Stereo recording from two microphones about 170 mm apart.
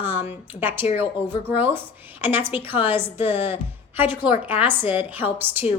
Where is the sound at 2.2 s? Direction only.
10° right (ahead or behind).